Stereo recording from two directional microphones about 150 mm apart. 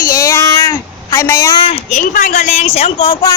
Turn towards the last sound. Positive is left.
turn(degrees=45)  # may be behind; listen again after turning